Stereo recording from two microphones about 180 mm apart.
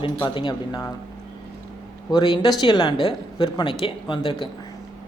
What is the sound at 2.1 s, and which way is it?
A woman's voice, 25° left (ahead or behind).